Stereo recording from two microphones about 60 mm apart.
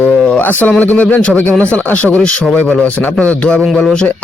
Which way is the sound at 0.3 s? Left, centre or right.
Left.